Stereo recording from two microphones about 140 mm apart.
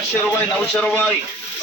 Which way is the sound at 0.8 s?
5° left (ahead or behind).